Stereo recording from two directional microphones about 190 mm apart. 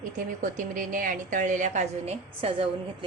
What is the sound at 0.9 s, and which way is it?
A woman's voice, 45° right (ahead or behind).